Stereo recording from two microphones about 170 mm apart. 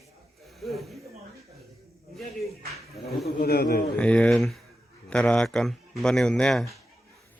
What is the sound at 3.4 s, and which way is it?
Speech, 65° left (ahead or behind).